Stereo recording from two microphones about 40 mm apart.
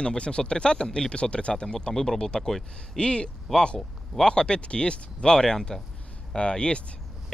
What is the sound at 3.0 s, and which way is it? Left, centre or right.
Speech, left.